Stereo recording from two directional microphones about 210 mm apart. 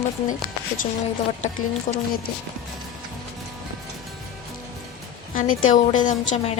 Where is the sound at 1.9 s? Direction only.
35° left (ahead or behind).